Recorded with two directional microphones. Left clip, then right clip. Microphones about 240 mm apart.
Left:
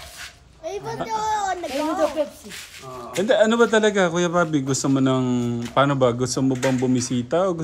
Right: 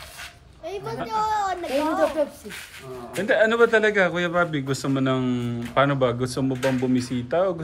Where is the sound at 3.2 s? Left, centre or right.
Left.